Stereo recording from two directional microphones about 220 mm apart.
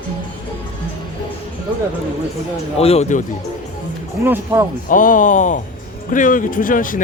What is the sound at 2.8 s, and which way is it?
Speech, 30° left (ahead or behind).